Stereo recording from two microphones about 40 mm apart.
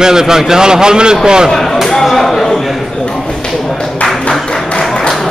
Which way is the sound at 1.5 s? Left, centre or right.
Centre.